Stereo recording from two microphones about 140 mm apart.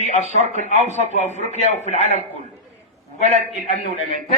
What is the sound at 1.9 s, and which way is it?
Speech, 55° right (ahead or behind).